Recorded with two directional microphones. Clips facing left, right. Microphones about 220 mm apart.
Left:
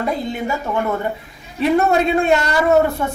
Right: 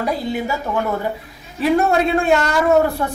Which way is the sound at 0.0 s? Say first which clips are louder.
Even; centre (ahead or behind).